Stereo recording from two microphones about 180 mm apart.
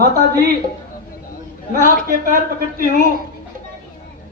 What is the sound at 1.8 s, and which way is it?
A woman's voice, 50° right (ahead or behind).